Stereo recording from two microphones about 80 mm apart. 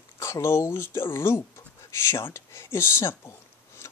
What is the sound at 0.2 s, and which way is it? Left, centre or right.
Speech, left.